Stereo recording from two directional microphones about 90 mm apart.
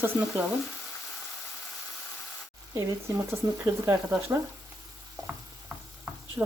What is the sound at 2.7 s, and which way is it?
Speech, 30° right (ahead or behind).